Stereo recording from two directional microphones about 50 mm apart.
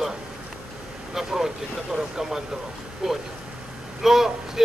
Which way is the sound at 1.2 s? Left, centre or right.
Centre.